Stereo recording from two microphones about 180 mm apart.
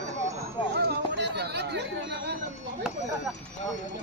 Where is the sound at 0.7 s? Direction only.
65° right (ahead or behind).